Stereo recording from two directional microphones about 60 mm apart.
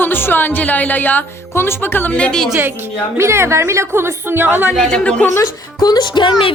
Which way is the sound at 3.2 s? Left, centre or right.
Right.